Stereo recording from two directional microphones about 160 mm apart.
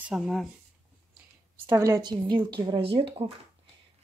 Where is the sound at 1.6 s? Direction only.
15° right (ahead or behind); by 3.1 s 35° right (ahead or behind).